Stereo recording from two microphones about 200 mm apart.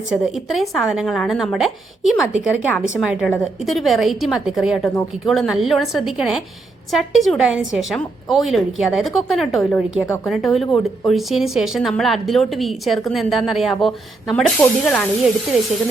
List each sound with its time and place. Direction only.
0.1 s a woman's voice: centre (ahead or behind)